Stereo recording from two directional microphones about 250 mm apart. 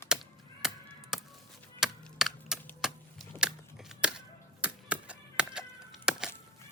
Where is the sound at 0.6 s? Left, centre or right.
Centre.